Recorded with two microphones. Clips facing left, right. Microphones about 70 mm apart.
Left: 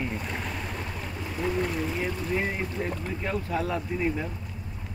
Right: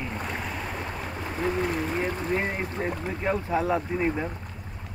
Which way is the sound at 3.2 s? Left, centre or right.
Right.